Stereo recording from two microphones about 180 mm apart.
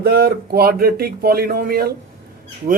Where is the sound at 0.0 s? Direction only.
60° right (ahead or behind).